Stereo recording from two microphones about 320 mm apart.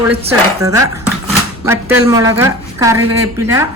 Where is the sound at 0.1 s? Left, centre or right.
Centre.